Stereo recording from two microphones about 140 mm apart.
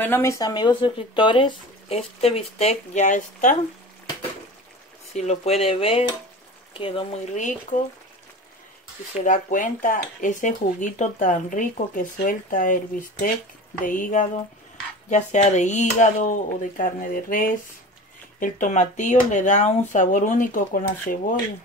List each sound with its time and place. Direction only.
0.0 s speech: 15° left (ahead or behind); by 3.5 s 60° left (ahead or behind)
5.1 s speech: 50° left (ahead or behind)
7.3 s speech: 65° left (ahead or behind)
9.1 s speech: 65° left (ahead or behind)
13.8 s speech: 70° left (ahead or behind)
15.0 s speech: 60° left (ahead or behind); by 17.5 s 80° left
18.4 s speech: 65° left (ahead or behind)